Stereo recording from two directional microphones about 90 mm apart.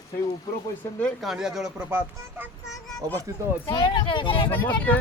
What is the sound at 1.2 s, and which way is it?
Speech, 5° right (ahead or behind).